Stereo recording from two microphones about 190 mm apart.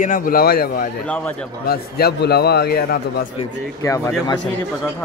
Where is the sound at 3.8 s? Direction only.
15° left (ahead or behind).